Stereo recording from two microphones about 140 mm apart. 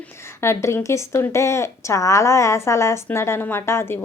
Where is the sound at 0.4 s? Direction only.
20° left (ahead or behind).